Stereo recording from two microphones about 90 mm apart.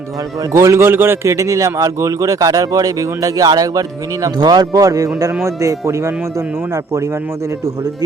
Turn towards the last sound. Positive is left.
turn(degrees=-35)  # may be behind; listen again after turning